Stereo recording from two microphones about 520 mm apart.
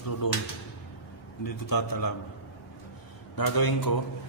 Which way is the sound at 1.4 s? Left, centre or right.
Left.